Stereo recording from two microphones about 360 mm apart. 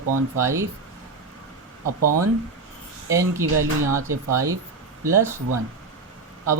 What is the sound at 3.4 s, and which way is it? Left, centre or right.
Speech, right.